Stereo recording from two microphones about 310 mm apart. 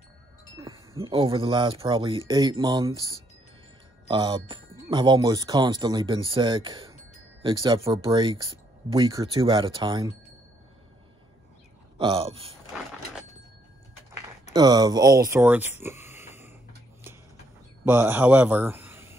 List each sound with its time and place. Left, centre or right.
0.6 s speech: centre
4.1 s speech: centre
12.0 s speech: centre
14.5 s speech: centre
17.8 s a man's voice: centre